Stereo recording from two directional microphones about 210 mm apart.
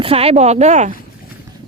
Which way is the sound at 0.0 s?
30° right (ahead or behind).